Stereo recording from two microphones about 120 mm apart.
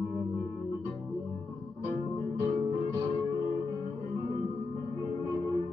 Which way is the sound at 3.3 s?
40° right (ahead or behind).